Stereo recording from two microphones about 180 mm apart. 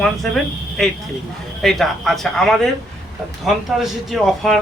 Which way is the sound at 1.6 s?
Centre (ahead or behind).